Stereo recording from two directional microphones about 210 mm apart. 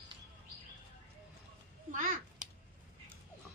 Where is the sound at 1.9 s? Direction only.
35° right (ahead or behind).